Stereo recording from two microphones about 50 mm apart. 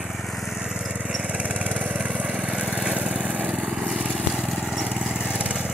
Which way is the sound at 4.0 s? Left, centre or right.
Centre.